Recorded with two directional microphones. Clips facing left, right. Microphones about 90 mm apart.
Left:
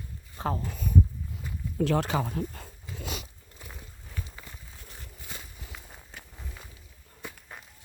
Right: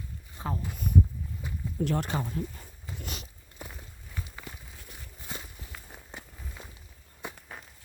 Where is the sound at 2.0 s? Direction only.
90° left.